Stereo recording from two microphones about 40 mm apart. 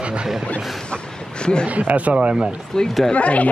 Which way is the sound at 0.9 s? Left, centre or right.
Left.